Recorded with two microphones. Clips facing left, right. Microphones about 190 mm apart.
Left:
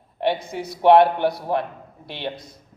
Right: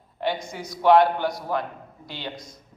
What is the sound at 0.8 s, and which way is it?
Speech, 25° left (ahead or behind).